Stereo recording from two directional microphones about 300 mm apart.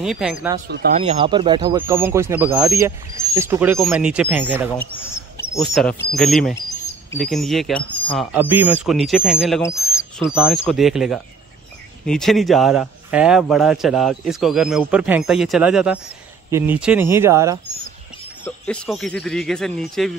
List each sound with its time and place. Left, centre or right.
0.0 s a man's voice: centre
0.9 s speech: centre
4.9 s a man's voice: centre
9.6 s bird: centre
10.2 s a man's voice: centre
18.4 s a man's voice: centre